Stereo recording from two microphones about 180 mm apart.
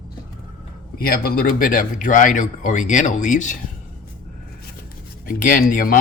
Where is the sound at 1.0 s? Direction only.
55° left (ahead or behind).